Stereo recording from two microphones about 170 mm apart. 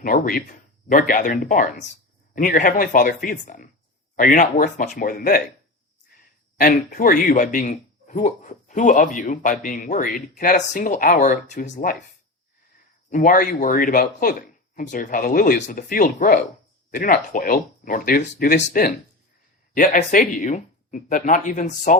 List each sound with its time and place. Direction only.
0.0 s speech: 55° left (ahead or behind)
6.6 s speech: 55° left (ahead or behind)
13.1 s speech: 55° left (ahead or behind)